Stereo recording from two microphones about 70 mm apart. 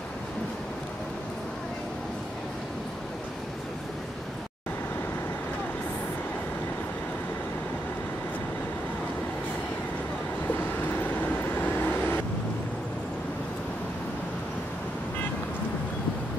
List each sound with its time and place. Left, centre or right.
11.7 s vehicle: left